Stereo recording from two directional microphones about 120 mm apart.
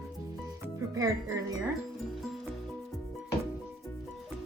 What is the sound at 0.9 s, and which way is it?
Speech, 30° right (ahead or behind).